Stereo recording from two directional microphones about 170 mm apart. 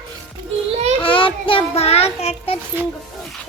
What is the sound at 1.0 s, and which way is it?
A child's voice, 30° left (ahead or behind).